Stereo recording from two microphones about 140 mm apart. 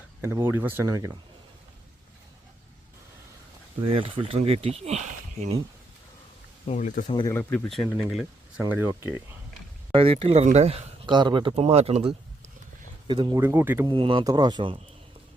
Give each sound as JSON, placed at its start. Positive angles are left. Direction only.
{"t": 0.2, "sound": "speech", "side_deg": -20}
{"t": 3.8, "sound": "speech", "side_deg": -40}
{"t": 6.7, "sound": "speech", "side_deg": 65}
{"t": 7.5, "sound": "speech", "side_deg": 5}
{"t": 8.9, "sound": "speech", "side_deg": -20}
{"t": 9.9, "sound": "speech", "side_deg": -40}
{"t": 11.0, "sound": "speech", "side_deg": -35}
{"t": 13.1, "sound": "speech", "side_deg": -30}
{"t": 13.4, "sound": "speech", "side_deg": -15}
{"t": 13.8, "sound": "speech", "side_deg": -35}